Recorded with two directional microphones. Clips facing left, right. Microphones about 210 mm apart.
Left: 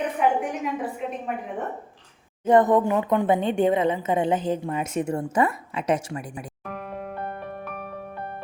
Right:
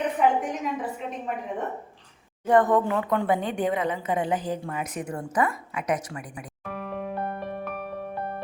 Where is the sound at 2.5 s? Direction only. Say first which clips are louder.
Left 2 dB; 20° left (ahead or behind).